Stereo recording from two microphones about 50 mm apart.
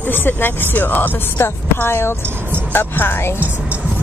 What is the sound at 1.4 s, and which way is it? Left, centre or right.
A woman's voice, left.